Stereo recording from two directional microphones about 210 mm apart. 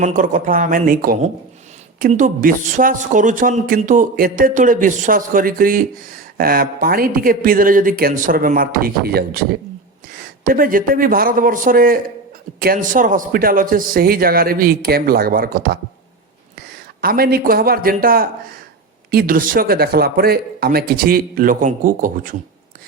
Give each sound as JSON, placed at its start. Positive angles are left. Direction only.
{"t": 0.0, "sound": "speech", "side_deg": -40}
{"t": 17.0, "sound": "speech", "side_deg": -45}